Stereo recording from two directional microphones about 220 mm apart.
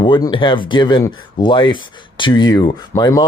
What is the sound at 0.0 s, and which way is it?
Speech, 20° left (ahead or behind).